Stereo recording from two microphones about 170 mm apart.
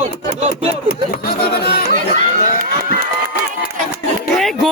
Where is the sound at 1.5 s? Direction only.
75° left (ahead or behind).